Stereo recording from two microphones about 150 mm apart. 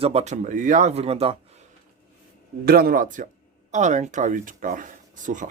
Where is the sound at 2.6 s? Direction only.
85° right; by 5.4 s 60° right (ahead or behind).